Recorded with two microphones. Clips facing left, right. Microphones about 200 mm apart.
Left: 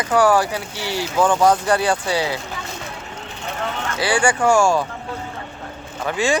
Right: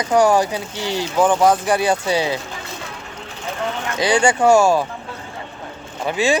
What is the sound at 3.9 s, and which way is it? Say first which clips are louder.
Speech: right 3 dB; 20° right (ahead or behind).